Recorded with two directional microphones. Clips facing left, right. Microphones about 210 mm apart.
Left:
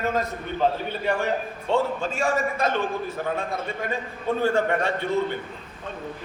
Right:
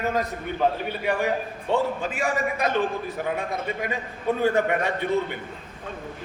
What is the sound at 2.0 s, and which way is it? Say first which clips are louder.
A man's voice: left 1 dB; 15° right (ahead or behind).